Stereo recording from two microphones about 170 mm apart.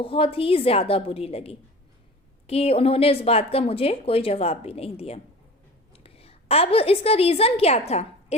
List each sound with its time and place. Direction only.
0.0 s a woman's voice: 30° left (ahead or behind)